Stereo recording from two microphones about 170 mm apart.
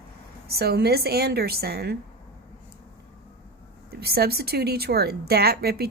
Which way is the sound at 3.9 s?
65° right (ahead or behind).